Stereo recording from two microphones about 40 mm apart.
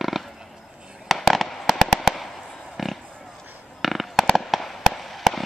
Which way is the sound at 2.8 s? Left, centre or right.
Centre.